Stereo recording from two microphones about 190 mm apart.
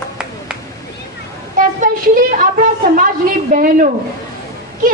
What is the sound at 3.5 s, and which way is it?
Speech, 45° right (ahead or behind).